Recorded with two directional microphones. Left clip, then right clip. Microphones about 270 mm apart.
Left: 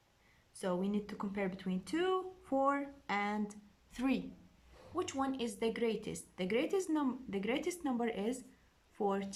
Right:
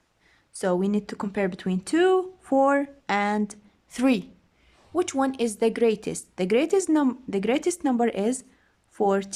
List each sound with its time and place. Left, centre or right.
0.5 s speech: right